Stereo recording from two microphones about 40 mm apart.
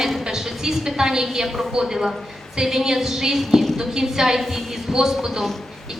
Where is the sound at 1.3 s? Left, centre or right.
Centre.